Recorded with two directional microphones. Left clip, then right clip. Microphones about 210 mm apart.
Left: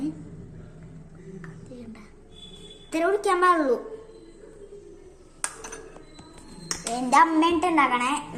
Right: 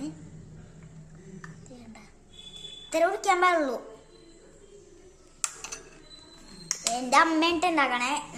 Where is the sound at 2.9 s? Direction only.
15° right (ahead or behind).